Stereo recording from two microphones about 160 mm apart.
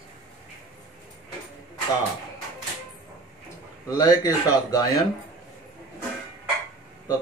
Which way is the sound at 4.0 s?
25° left (ahead or behind).